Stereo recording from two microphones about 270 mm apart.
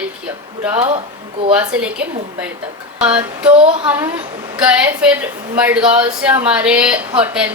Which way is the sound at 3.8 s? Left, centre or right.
Centre.